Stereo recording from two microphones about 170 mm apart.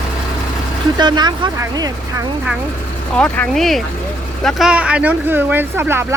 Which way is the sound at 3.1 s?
10° left (ahead or behind).